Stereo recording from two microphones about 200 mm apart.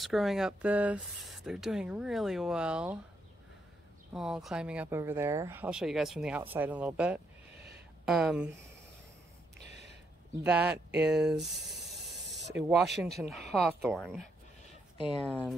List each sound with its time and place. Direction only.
0.0 s speech: centre (ahead or behind)
4.1 s speech: 5° right (ahead or behind)
10.4 s speech: 5° right (ahead or behind)
11.4 s a sound: centre (ahead or behind)
12.4 s a sound: 60° right (ahead or behind)
12.6 s speech: centre (ahead or behind)
15.0 s speech: 25° left (ahead or behind)
15.2 s speech: 5° left (ahead or behind)